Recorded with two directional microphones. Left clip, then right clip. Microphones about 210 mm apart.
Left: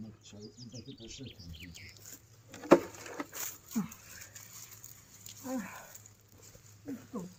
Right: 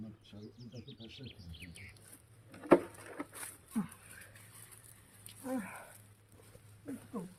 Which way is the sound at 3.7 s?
20° left (ahead or behind).